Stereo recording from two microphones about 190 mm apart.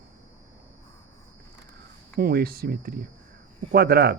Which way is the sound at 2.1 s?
50° right (ahead or behind).